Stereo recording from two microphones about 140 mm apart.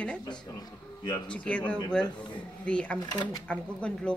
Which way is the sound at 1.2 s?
10° left (ahead or behind).